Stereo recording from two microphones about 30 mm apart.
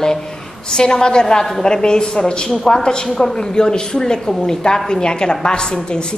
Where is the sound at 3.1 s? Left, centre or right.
Centre.